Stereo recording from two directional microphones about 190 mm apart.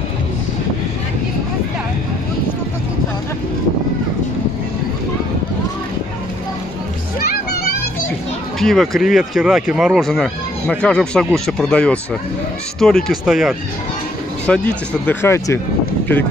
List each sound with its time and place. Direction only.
7.2 s children playing: 50° left (ahead or behind)
8.5 s speech: centre (ahead or behind)